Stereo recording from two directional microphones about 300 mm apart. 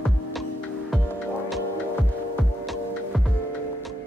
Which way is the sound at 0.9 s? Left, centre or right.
Centre.